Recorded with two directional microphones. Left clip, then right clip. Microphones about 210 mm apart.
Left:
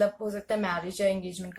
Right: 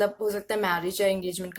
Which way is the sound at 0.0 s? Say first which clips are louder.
Right 1 dB; 45° right (ahead or behind).